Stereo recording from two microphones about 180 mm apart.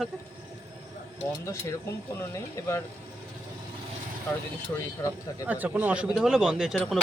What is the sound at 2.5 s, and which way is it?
Speech, 15° left (ahead or behind).